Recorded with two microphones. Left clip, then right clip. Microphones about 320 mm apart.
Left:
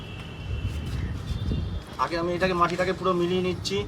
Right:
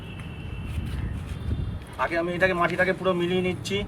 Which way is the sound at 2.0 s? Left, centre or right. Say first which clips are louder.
Right 2 dB; centre.